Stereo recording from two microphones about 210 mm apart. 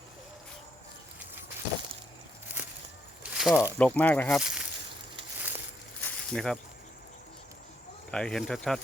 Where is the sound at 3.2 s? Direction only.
5° right (ahead or behind).